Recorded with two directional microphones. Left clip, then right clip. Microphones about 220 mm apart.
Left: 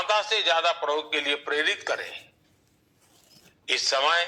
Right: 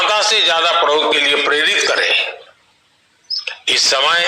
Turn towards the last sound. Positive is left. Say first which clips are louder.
# right 9 dB
turn(degrees=-55)  # may be behind; listen again after turning